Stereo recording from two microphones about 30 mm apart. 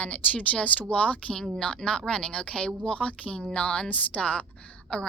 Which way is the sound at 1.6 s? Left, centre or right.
Left.